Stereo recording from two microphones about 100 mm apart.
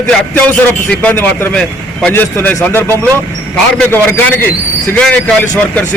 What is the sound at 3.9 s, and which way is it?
A man's voice, 20° left (ahead or behind).